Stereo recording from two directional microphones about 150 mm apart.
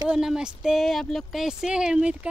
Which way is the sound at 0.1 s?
5° right (ahead or behind).